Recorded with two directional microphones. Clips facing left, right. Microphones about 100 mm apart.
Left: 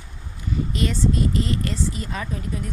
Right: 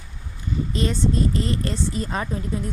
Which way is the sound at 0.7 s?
30° right (ahead or behind).